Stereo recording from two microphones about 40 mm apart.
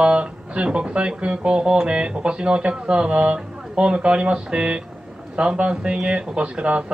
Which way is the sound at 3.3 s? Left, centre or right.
Centre.